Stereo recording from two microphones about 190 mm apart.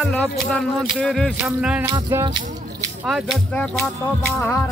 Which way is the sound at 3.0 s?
Centre (ahead or behind).